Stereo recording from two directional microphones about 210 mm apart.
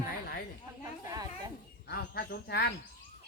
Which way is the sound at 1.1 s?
15° right (ahead or behind).